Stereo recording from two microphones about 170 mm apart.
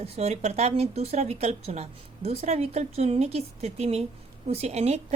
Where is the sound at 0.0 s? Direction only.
40° right (ahead or behind).